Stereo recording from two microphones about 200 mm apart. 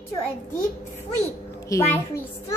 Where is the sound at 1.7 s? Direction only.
10° left (ahead or behind).